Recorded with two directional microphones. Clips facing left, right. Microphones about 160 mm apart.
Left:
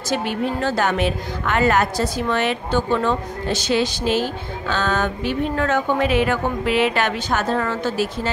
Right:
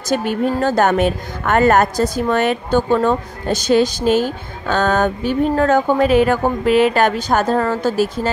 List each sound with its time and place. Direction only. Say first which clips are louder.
0.1 s a woman's voice: right 5 dB; 45° right (ahead or behind)